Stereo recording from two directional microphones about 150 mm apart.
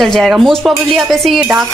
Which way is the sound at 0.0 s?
Centre (ahead or behind).